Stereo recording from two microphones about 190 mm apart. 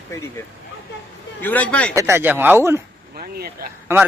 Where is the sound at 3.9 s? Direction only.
10° right (ahead or behind).